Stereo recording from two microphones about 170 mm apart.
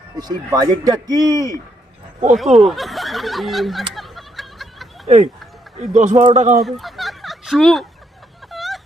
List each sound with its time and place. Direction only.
0.2 s speech: 25° right (ahead or behind)
2.3 s speech: centre (ahead or behind)
3.9 s a sound: centre (ahead or behind)
5.0 s speech: 40° right (ahead or behind)
6.6 s fowl: centre (ahead or behind)
8.4 s vehicle: centre (ahead or behind)